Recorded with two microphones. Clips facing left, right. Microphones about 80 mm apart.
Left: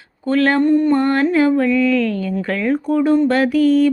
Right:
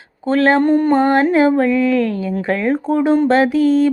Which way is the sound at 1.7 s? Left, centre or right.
Right.